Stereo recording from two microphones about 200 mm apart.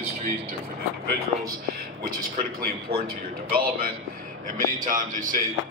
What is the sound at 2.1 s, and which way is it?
A man's voice, 45° right (ahead or behind).